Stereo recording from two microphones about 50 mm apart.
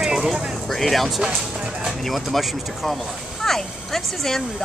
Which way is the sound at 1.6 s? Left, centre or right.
Centre.